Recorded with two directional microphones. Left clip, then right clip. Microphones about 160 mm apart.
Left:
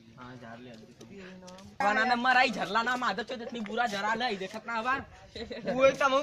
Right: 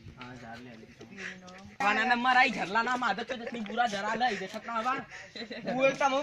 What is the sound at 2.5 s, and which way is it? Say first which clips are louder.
Speech: even; 30° left (ahead or behind).